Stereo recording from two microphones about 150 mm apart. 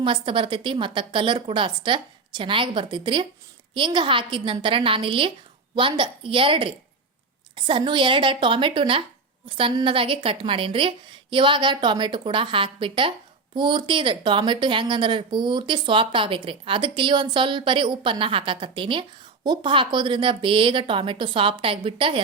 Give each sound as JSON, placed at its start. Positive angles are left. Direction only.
{"t": 0.0, "sound": "a woman's voice", "side_deg": -35}